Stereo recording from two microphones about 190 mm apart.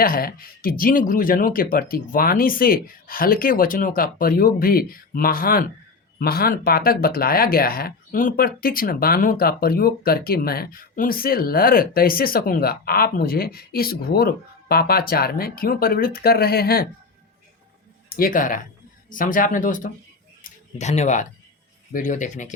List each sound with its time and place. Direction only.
0.0 s speech: 50° left (ahead or behind)
18.1 s speech: 50° left (ahead or behind)
20.4 s a sound: 35° left (ahead or behind)
21.9 s speech: 40° left (ahead or behind)